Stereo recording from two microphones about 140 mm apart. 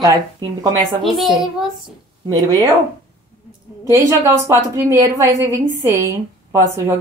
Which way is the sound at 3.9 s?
20° right (ahead or behind).